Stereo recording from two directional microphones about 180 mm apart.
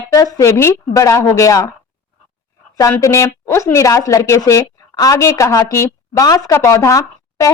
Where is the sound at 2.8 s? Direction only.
20° left (ahead or behind).